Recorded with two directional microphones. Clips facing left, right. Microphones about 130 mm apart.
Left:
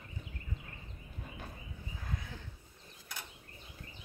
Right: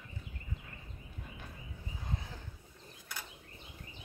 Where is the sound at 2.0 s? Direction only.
30° right (ahead or behind).